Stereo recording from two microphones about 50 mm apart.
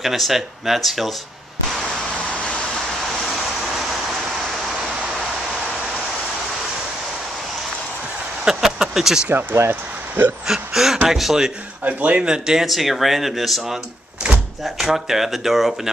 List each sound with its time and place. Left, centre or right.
0.0 s speech: centre
3.3 s vehicle: centre
8.5 s a sound: centre
9.6 s speech: right
10.4 s a sound: centre
11.1 s speech: centre
11.8 s a man's voice: right
12.3 s a sound: centre
12.6 s speech: centre